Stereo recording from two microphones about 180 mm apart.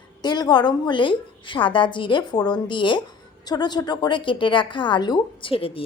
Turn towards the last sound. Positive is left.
turn(degrees=30)  # may be behind; listen again after turning